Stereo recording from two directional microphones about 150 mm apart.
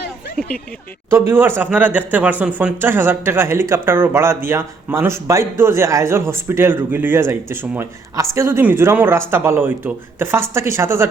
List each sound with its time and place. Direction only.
0.3 s speech: 5° left (ahead or behind)
1.3 s speech: 15° right (ahead or behind)